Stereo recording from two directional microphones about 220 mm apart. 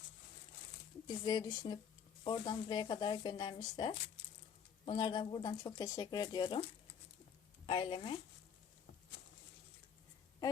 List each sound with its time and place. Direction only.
1.0 s speech: 20° left (ahead or behind)
7.7 s speech: 20° left (ahead or behind)